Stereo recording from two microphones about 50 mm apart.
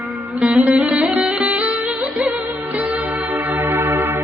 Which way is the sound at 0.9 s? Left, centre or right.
Right.